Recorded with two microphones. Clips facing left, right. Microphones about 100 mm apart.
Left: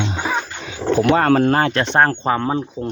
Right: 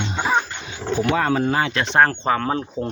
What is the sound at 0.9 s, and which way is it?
Speech, 60° left (ahead or behind).